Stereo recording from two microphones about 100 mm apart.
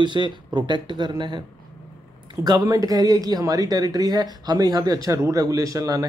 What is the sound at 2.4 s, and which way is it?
Speech, 40° right (ahead or behind).